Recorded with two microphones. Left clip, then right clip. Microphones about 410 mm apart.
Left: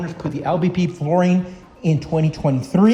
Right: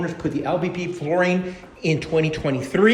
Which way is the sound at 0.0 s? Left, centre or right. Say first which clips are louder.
Even; centre.